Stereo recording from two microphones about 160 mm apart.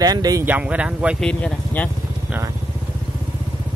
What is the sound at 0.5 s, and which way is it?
Speech, 10° right (ahead or behind).